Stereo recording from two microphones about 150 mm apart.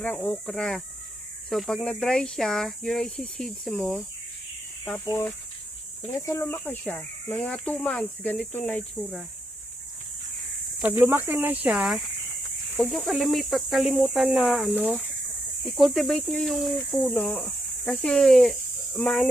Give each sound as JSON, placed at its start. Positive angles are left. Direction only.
{"t": 0.0, "sound": "speech", "side_deg": 10}
{"t": 5.0, "sound": "speech", "side_deg": 15}
{"t": 10.8, "sound": "speech", "side_deg": -10}